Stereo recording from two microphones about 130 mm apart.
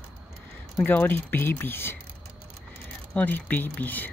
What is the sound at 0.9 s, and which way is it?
Speech, 15° left (ahead or behind).